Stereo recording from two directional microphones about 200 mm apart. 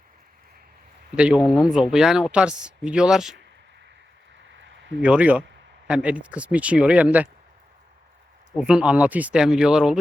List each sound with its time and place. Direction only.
1.1 s speech: 5° right (ahead or behind)
4.6 s a sound: 65° right (ahead or behind)
5.0 s speech: 5° right (ahead or behind)
8.5 s speech: 5° right (ahead or behind)